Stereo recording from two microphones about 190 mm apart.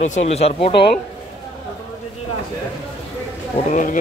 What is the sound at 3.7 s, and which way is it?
Speech, 45° left (ahead or behind).